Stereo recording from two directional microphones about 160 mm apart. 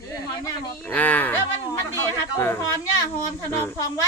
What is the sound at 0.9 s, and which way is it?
Speech, 10° left (ahead or behind).